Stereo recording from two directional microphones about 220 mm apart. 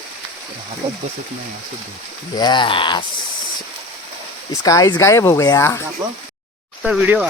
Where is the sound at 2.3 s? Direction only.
20° left (ahead or behind).